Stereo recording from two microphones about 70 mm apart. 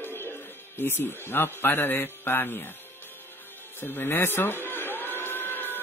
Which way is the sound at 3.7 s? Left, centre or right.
Left.